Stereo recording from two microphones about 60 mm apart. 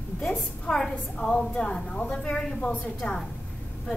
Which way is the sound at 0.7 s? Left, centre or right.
Centre.